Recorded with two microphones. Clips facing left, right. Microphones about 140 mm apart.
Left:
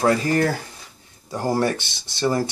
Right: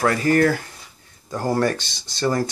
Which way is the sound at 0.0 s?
20° left (ahead or behind).